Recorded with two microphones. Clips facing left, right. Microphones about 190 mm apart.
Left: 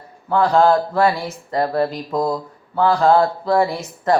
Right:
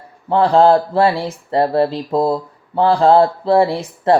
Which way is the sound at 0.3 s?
30° right (ahead or behind).